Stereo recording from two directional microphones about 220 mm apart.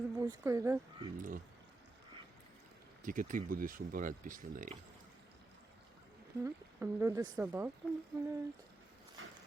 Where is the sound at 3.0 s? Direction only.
40° right (ahead or behind).